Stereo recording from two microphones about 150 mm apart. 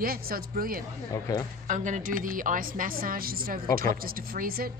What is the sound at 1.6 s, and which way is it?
A woman's voice, 55° right (ahead or behind).